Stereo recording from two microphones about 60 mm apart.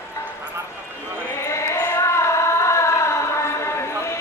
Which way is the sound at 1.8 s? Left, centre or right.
Left.